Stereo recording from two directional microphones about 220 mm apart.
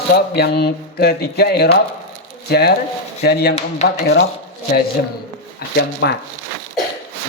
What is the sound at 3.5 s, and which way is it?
Speech, 30° left (ahead or behind).